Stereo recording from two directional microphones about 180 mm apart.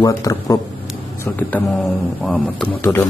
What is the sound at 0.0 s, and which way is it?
Speech, 20° left (ahead or behind).